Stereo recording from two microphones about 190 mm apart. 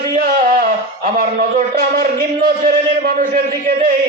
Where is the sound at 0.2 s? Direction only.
50° right (ahead or behind).